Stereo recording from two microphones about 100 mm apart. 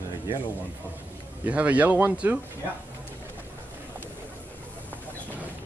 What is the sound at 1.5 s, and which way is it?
Speech, 15° right (ahead or behind).